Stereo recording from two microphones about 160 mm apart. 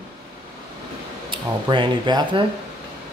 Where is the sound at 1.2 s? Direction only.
30° right (ahead or behind).